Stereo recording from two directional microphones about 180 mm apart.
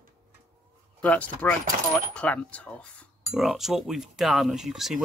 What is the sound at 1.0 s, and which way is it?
Speech, 10° left (ahead or behind).